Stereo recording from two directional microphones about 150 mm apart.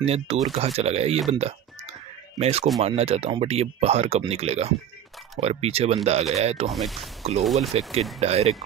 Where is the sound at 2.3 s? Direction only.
45° right (ahead or behind).